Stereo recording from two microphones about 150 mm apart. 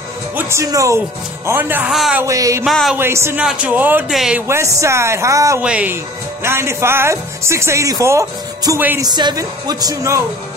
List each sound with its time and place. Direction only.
0.4 s speech: 20° right (ahead or behind); by 2.2 s 5° right (ahead or behind)
2.2 s speech: 20° right (ahead or behind)
2.6 s speech: centre (ahead or behind)
3.0 s speech: 15° right (ahead or behind); by 4.4 s centre (ahead or behind)
4.5 s speech: 20° right (ahead or behind)
5.6 s speech: 10° right (ahead or behind)
9.0 s speech: 25° right (ahead or behind)